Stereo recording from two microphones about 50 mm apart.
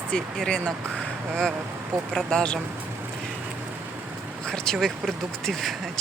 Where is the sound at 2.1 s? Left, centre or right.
Centre.